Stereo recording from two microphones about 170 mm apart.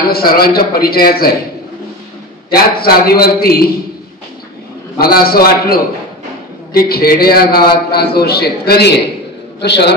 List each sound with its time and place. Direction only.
0.1 s a man's voice: 65° left (ahead or behind)
2.5 s a man's voice: 65° left (ahead or behind)
4.9 s a man's voice: 60° left (ahead or behind); by 9.9 s 80° left